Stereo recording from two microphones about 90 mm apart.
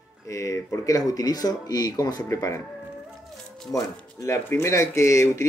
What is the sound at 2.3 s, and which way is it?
Speech, 35° left (ahead or behind).